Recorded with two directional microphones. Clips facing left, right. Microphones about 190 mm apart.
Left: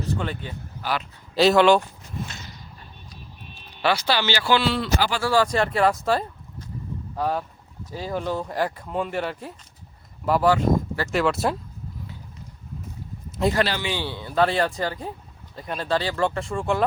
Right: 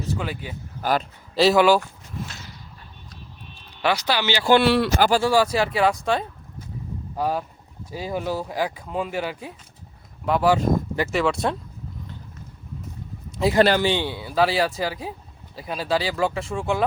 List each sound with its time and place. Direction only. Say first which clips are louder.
0.2 s speech: even; 5° right (ahead or behind)
0.8 s speech: right 5 dB; 45° right (ahead or behind)
1.4 s speech: even; 5° right (ahead or behind)
2.1 s a sound: left 1 dB; centre (ahead or behind)
3.8 s speech: even; 15° right (ahead or behind)
4.4 s a man's voice: right 7 dB; 55° right (ahead or behind)
4.9 s speech: right 6 dB; 45° right (ahead or behind)
5.2 s speech: right 1 dB; 10° right (ahead or behind)
7.2 s speech: right 1 dB; 10° right (ahead or behind)
10.5 s speech: even; 15° right (ahead or behind)
11.1 s speech: left 1 dB; centre (ahead or behind)
13.4 s speech: right 1 dB; centre (ahead or behind)
14.0 s speech: right 1 dB; 10° right (ahead or behind)